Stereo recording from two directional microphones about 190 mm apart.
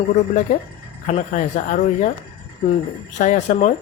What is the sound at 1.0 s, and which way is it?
A man's voice, 40° left (ahead or behind).